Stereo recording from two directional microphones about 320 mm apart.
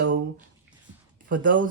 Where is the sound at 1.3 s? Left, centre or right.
Right.